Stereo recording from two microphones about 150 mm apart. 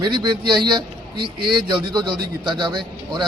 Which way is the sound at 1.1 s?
90° right.